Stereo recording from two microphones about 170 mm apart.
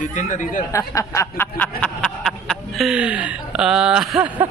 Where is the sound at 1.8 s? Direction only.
5° left (ahead or behind).